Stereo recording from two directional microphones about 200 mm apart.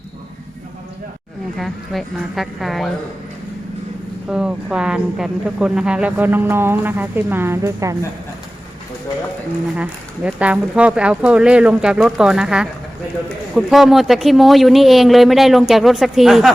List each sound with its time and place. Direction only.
1.5 s speech: centre (ahead or behind)
4.3 s speech: 5° right (ahead or behind)
9.7 s speech: 5° right (ahead or behind)